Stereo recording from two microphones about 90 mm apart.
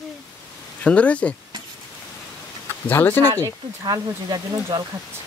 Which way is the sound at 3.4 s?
50° right (ahead or behind).